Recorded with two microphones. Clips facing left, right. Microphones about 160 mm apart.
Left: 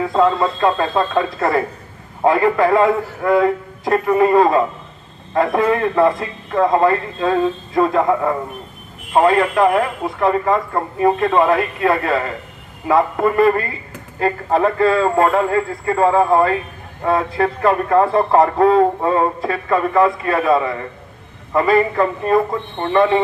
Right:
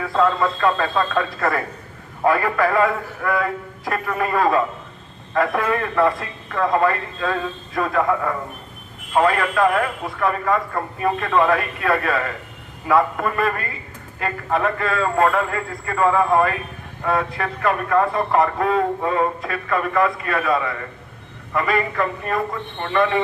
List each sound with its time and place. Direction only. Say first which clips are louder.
0.0 s a man's voice: left 3 dB; 20° left (ahead or behind)